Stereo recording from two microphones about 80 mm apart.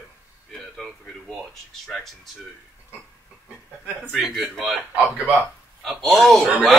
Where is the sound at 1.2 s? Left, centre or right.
Centre.